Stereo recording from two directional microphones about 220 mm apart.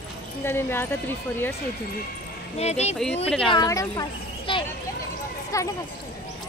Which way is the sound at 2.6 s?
30° left (ahead or behind).